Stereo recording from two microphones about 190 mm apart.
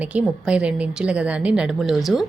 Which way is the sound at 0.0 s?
5° right (ahead or behind).